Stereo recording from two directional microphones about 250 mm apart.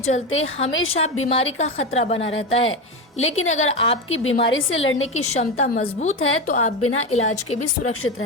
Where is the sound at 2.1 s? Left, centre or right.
Left.